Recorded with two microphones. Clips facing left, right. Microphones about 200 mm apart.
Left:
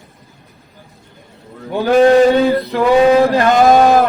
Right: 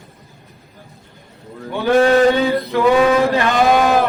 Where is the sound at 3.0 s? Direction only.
35° left (ahead or behind).